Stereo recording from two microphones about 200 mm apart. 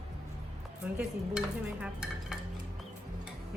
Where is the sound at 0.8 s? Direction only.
10° right (ahead or behind).